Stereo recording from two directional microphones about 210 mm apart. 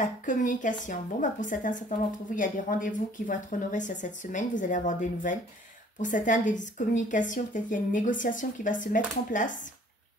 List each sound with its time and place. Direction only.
0.0 s a woman's voice: 40° left (ahead or behind)